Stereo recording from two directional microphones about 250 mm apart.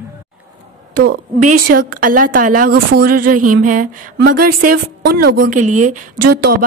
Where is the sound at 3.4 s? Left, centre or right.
Right.